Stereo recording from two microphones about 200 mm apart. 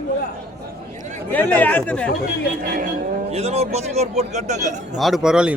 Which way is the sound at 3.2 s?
30° right (ahead or behind).